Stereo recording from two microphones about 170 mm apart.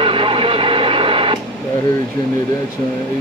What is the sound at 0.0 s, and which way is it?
Radio, 30° right (ahead or behind).